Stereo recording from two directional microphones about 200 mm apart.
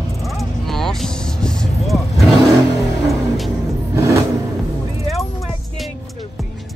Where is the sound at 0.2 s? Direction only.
Centre (ahead or behind).